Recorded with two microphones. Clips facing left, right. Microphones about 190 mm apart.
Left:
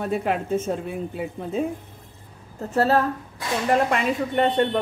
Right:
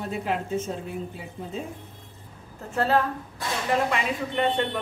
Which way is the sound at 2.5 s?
40° left (ahead or behind).